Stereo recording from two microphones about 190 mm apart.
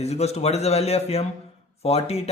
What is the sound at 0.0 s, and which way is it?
A man's voice, 35° left (ahead or behind).